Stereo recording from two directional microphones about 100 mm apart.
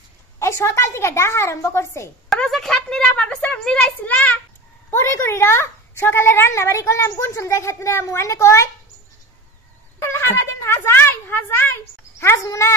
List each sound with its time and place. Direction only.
0.4 s a woman's voice: 30° left (ahead or behind)
2.2 s a woman's voice: 5° left (ahead or behind)
4.9 s a woman's voice: 25° left (ahead or behind)
9.9 s a sound: 25° left (ahead or behind)
12.2 s a woman's voice: 30° left (ahead or behind)